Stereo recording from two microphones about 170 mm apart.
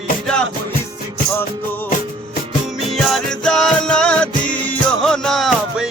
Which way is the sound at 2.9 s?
Centre (ahead or behind).